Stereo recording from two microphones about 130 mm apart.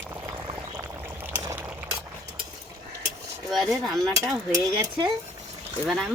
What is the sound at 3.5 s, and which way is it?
Speech, centre (ahead or behind).